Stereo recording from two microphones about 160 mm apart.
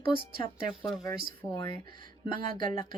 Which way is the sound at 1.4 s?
30° left (ahead or behind).